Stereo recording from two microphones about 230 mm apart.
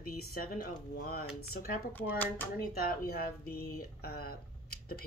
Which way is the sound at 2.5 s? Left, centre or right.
Left.